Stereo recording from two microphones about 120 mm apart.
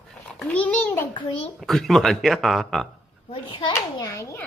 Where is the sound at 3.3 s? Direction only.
40° left (ahead or behind).